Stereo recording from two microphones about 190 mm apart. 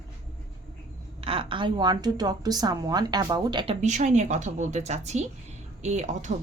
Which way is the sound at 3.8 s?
40° right (ahead or behind).